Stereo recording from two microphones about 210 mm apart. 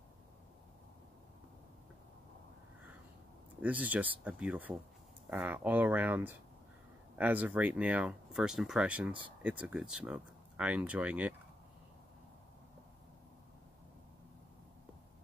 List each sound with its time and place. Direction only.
3.6 s speech: 5° right (ahead or behind)